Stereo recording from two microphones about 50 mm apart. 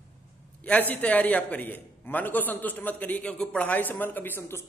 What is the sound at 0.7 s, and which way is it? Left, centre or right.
A man's voice, left.